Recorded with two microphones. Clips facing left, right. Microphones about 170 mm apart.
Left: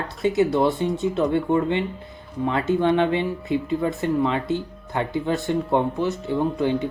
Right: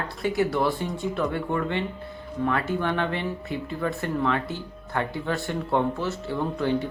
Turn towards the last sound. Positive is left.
turn(degrees=20)  # may be behind; listen again after turning